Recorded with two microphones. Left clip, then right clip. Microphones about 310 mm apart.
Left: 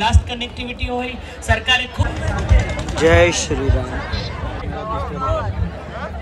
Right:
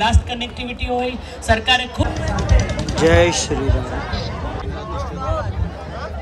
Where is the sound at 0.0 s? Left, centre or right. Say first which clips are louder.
Right 1 dB; centre.